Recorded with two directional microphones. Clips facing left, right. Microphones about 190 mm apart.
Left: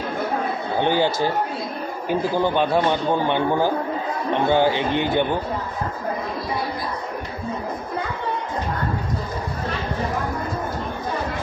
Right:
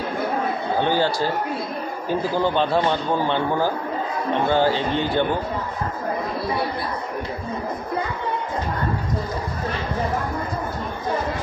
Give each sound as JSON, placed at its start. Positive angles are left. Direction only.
{"t": 0.7, "sound": "a man's voice", "side_deg": 15}